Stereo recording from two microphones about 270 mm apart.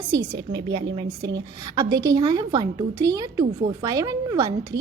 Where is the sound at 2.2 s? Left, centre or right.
Centre.